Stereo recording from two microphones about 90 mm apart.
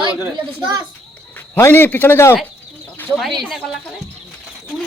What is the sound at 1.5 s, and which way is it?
Speech, 25° left (ahead or behind).